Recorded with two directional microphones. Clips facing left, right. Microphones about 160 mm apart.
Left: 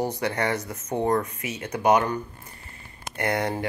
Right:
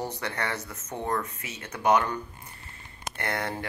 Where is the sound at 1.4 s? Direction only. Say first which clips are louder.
Left 8 dB; 15° left (ahead or behind).